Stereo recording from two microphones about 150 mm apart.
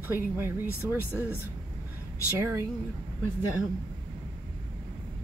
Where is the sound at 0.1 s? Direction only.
15° right (ahead or behind).